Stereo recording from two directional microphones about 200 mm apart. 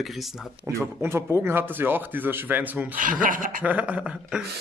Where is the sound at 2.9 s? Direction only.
40° right (ahead or behind).